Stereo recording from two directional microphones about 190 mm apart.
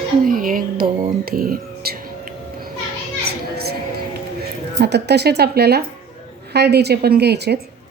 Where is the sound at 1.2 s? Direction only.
50° right (ahead or behind).